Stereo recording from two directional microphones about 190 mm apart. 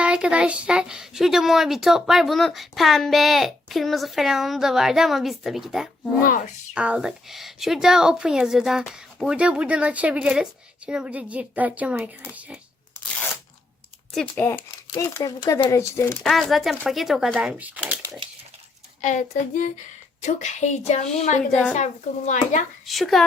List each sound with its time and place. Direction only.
0.0 s speech: 5° right (ahead or behind)
6.2 s a woman's voice: 45° left (ahead or behind)
6.7 s speech: 5° right (ahead or behind)
14.1 s speech: 5° left (ahead or behind)
16.2 s speech: centre (ahead or behind)
19.0 s speech: 40° left (ahead or behind)
21.5 s speech: 5° left (ahead or behind)
21.8 s speech: 40° left (ahead or behind)
22.9 s speech: centre (ahead or behind)